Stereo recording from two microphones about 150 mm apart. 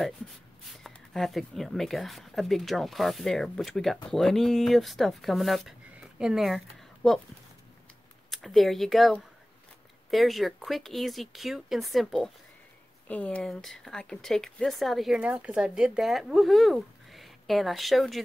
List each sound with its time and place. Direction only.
0.8 s speech: centre (ahead or behind)
8.3 s speech: centre (ahead or behind)